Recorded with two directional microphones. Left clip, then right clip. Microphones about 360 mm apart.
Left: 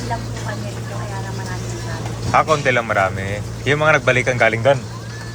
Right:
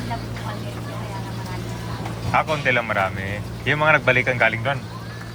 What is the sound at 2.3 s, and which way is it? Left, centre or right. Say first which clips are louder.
A man's voice: left 4 dB; centre.